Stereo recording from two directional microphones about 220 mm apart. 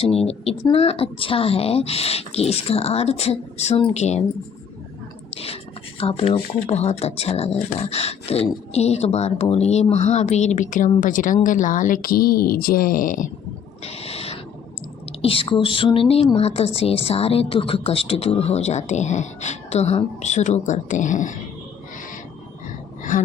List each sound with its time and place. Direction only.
0.0 s a woman's voice: 25° left (ahead or behind)
5.3 s a sound: 25° left (ahead or behind)
6.0 s a woman's voice: 25° left (ahead or behind)
13.8 s owl: 25° left (ahead or behind)
15.2 s a woman's voice: 25° left (ahead or behind)
23.1 s speech: 40° left (ahead or behind)